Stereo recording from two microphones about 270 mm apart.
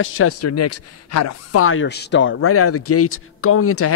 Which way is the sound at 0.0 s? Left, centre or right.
Left.